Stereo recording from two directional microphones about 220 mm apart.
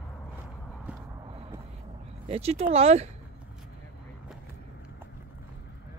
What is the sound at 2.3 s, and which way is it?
Speech, 25° right (ahead or behind).